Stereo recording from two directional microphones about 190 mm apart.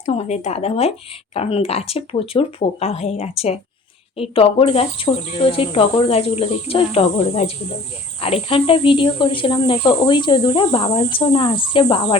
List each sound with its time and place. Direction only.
0.0 s speech: 35° left (ahead or behind)